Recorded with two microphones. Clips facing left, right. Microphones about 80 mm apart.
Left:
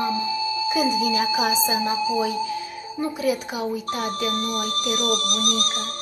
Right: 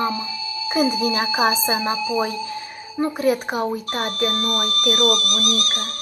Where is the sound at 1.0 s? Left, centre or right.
Right.